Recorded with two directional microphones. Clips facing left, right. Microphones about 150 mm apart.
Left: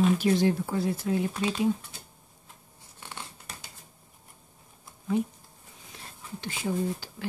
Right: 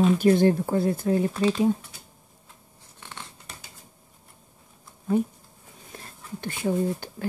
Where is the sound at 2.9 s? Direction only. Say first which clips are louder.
Even; 5° left (ahead or behind).